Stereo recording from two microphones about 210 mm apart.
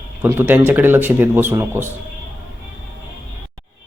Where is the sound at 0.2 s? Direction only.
10° right (ahead or behind).